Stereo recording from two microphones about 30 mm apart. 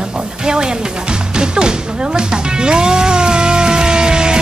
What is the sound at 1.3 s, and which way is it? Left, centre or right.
Music, right.